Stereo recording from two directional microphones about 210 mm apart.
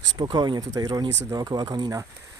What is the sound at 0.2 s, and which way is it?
Speech, 20° right (ahead or behind).